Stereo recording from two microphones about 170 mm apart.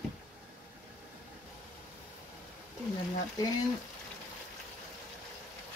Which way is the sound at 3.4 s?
20° left (ahead or behind).